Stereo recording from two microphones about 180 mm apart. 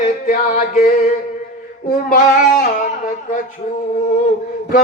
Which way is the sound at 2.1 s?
45° left (ahead or behind).